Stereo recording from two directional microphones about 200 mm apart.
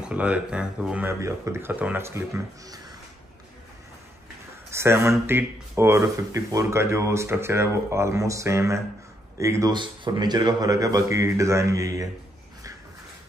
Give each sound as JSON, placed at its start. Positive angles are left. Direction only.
{"t": 0.0, "sound": "speech", "side_deg": -5}
{"t": 4.6, "sound": "speech", "side_deg": -15}